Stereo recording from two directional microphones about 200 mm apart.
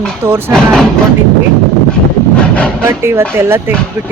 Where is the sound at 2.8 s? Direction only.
15° right (ahead or behind).